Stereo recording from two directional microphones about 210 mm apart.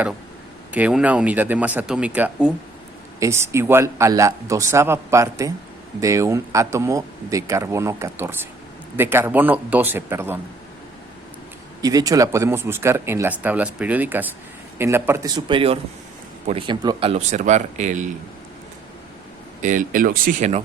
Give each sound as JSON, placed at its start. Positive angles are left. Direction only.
{"t": 0.7, "sound": "speech", "side_deg": -5}
{"t": 11.8, "sound": "speech", "side_deg": -15}
{"t": 19.6, "sound": "speech", "side_deg": -40}